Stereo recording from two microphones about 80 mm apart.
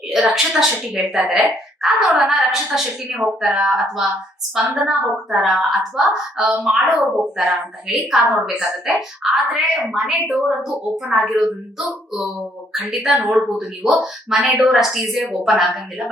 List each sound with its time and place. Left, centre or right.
0.1 s a woman's voice: centre